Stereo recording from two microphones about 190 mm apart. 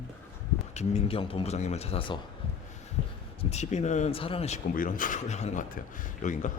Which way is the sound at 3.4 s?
35° left (ahead or behind).